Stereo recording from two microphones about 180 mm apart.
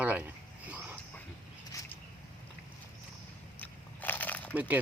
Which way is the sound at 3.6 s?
10° left (ahead or behind).